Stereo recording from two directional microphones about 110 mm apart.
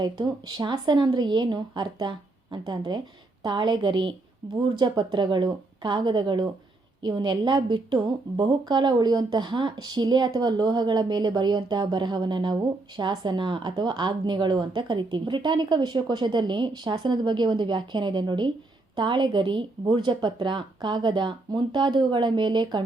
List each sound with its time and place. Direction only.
0.0 s a woman's voice: 40° right (ahead or behind)